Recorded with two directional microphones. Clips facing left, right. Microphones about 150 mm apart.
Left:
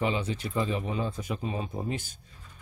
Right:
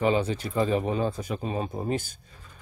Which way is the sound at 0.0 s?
40° right (ahead or behind).